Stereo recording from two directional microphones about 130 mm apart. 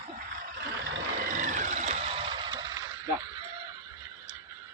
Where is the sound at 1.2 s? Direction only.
85° right; by 1.9 s 70° right (ahead or behind).